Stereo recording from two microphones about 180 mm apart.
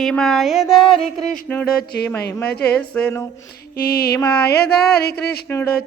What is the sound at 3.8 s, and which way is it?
Speech, 55° left (ahead or behind).